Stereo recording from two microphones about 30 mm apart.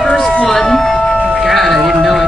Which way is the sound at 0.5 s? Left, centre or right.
Centre.